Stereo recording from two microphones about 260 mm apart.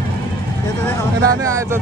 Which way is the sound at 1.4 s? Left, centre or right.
Centre.